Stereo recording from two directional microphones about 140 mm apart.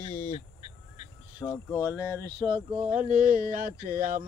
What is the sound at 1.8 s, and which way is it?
Speech, 15° right (ahead or behind).